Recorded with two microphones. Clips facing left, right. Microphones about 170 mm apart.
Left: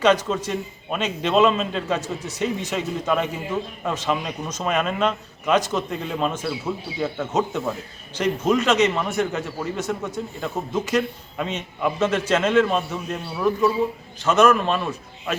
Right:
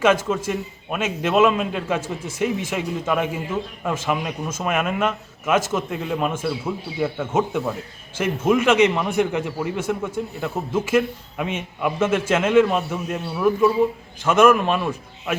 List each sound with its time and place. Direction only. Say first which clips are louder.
0.3 s speech: right 2 dB; 5° right (ahead or behind)
2.0 s speech: right 1 dB; 50° right (ahead or behind)
2.4 s speech: right 2 dB; 10° right (ahead or behind)